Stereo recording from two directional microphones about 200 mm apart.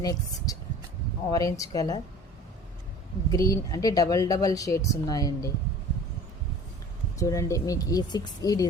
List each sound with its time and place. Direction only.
0.0 s speech: 15° left (ahead or behind)
3.3 s speech: 15° left (ahead or behind)
7.2 s speech: 15° left (ahead or behind)